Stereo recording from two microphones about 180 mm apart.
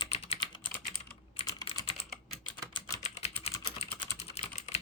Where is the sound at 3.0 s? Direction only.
35° left (ahead or behind).